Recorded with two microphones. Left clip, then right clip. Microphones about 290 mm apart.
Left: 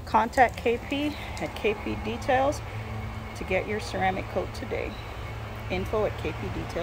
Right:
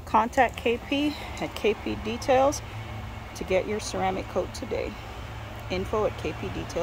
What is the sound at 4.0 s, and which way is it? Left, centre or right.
Speech, centre.